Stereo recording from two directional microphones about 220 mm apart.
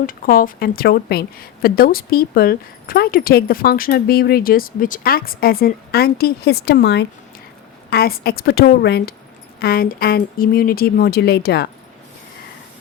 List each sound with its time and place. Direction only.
0.0 s a woman's voice: 40° left (ahead or behind)